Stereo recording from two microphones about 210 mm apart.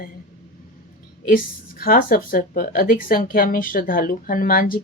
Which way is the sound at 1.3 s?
45° left (ahead or behind).